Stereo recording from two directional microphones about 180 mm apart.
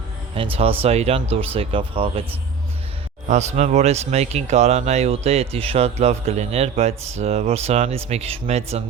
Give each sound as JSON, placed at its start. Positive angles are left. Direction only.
{"t": 0.5, "sound": "speech", "side_deg": -30}
{"t": 3.2, "sound": "speech", "side_deg": -40}